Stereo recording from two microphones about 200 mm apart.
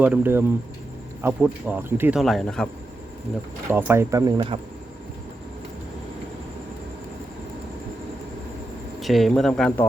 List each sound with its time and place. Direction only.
0.0 s speech: 10° right (ahead or behind)
3.7 s speech: 10° right (ahead or behind)
4.4 s speech: 30° right (ahead or behind)
9.0 s speech: centre (ahead or behind)